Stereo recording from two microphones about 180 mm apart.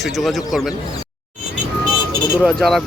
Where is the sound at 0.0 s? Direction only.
Centre (ahead or behind).